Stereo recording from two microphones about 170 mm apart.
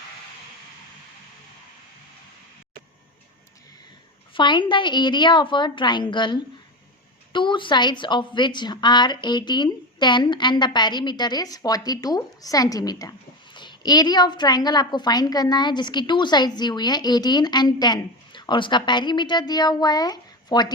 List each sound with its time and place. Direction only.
4.4 s a woman's voice: 30° left (ahead or behind)